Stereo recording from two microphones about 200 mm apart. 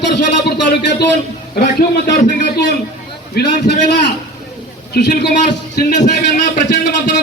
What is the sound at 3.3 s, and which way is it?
Speech, 55° left (ahead or behind).